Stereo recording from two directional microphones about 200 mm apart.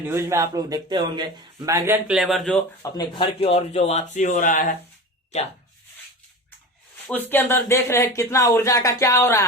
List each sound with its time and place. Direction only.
0.0 s speech: 10° right (ahead or behind)
3.0 s speech: 25° left (ahead or behind)
7.1 s speech: 10° left (ahead or behind)